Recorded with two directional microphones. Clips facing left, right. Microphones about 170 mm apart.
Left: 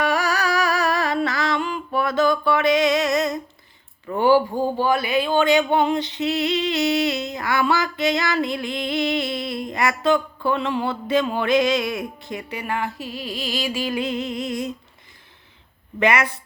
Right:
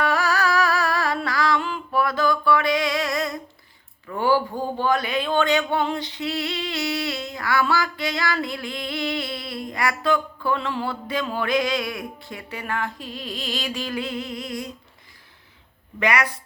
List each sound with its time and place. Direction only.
0.0 s music: 15° left (ahead or behind)
4.0 s speech: 25° left (ahead or behind)
16.0 s speech: 25° left (ahead or behind)